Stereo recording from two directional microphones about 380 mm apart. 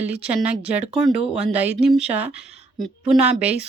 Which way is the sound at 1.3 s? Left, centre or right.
Centre.